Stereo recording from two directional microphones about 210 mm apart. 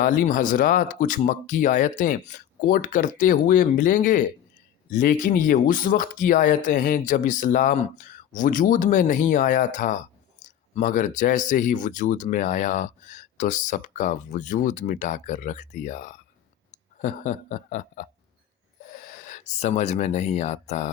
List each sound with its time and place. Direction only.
0.0 s speech: 40° left (ahead or behind)
16.7 s a sound: 35° left (ahead or behind)
18.9 s speech: 40° left (ahead or behind)